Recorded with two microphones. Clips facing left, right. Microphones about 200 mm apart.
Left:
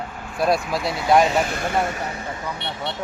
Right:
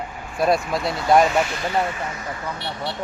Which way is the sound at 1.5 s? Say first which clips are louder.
Even; 50° left (ahead or behind).